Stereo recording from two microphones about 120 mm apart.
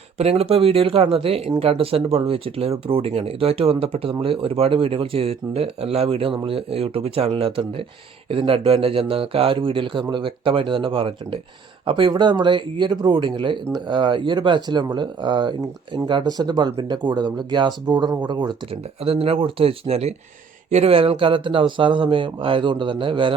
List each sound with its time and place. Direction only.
0.2 s speech: 60° right (ahead or behind); by 18.5 s 40° right (ahead or behind)
18.7 s speech: 55° right (ahead or behind)